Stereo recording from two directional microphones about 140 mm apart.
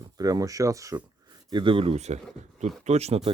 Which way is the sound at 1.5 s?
35° right (ahead or behind).